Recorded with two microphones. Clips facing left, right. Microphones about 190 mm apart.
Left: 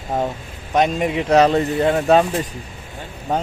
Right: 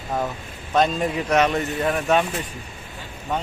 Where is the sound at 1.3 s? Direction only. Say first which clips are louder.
Left 7 dB; 35° left (ahead or behind).